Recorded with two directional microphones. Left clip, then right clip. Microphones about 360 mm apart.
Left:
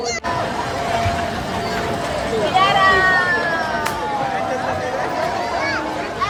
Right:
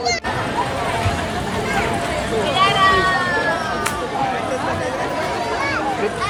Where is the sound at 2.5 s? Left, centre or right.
Left.